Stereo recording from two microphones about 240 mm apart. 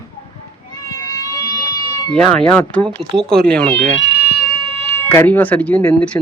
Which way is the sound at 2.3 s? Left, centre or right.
Centre.